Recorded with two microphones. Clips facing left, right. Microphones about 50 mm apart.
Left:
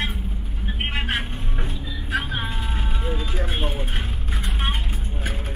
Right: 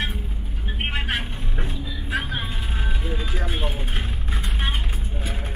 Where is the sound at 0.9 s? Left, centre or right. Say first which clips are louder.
Left 1 dB; left.